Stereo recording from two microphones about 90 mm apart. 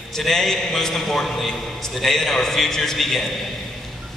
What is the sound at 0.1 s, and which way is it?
A man's voice, 5° left (ahead or behind).